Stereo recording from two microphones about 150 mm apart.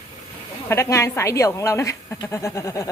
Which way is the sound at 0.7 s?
20° left (ahead or behind).